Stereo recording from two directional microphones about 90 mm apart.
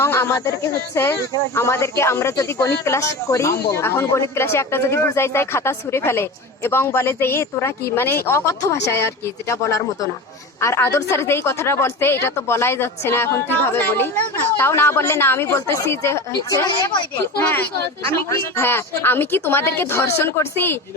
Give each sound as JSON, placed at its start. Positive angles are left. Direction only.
{"t": 0.0, "sound": "speech", "side_deg": 25}
{"t": 17.4, "sound": "speech", "side_deg": 20}